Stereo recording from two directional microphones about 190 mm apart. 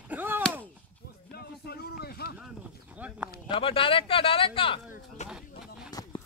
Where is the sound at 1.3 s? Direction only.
55° left (ahead or behind).